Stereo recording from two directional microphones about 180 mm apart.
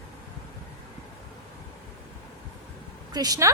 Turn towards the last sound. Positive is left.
turn(degrees=-20)  # may be behind; listen again after turning